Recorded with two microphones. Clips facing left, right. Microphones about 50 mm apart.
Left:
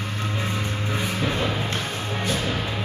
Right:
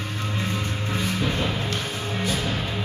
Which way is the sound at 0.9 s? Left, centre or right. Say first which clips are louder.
Even; centre.